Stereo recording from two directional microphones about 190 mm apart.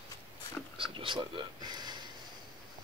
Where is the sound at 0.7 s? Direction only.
25° right (ahead or behind).